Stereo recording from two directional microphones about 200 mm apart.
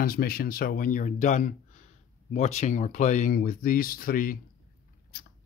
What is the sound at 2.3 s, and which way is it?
Speech, 35° left (ahead or behind).